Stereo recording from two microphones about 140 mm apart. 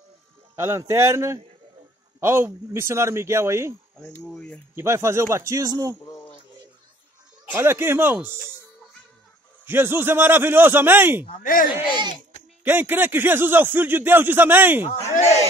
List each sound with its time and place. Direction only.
0.6 s speech: 20° right (ahead or behind)
4.2 s speech: 5° left (ahead or behind)
4.7 s speech: 20° right (ahead or behind)
7.5 s a man's voice: 15° right (ahead or behind)
9.7 s a man's voice: 15° right (ahead or behind)
11.4 s speech: 80° left
11.9 s speech: 30° right (ahead or behind)
12.6 s a man's voice: 15° right (ahead or behind)